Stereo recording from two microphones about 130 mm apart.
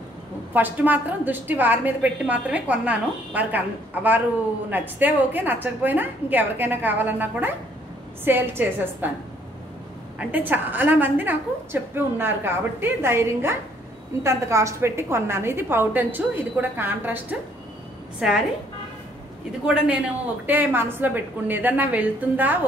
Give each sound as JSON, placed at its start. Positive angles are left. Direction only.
{"t": 0.5, "sound": "a woman's voice", "side_deg": -15}
{"t": 10.1, "sound": "a woman's voice", "side_deg": -15}
{"t": 19.6, "sound": "a woman's voice", "side_deg": -10}